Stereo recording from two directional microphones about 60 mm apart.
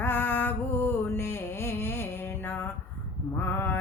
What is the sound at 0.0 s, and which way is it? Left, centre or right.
Music, left.